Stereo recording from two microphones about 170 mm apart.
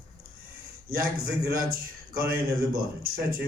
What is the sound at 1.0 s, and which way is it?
A man's voice, 60° right (ahead or behind).